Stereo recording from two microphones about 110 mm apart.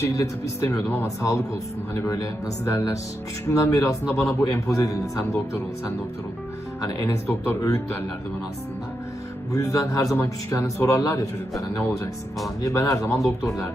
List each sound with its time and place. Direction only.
0.0 s speech: 25° left (ahead or behind)
0.9 s speech: 15° left (ahead or behind)
1.2 s a man's voice: 30° left (ahead or behind)
6.8 s a man's voice: 30° left (ahead or behind)
9.6 s a man's voice: 30° left (ahead or behind)
12.6 s speech: 30° left (ahead or behind)